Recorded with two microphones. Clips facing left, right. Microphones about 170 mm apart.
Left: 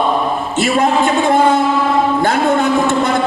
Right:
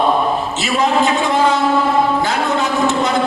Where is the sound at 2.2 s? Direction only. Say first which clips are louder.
Left 4 dB; 55° left (ahead or behind).